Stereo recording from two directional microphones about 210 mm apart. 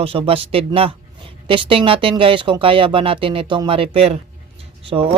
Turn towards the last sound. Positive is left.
turn(degrees=-25)  # may be behind; listen again after turning